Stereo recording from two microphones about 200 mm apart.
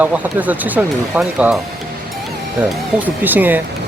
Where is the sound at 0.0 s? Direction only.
10° right (ahead or behind).